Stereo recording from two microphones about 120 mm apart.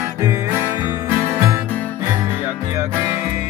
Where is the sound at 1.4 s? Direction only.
30° right (ahead or behind).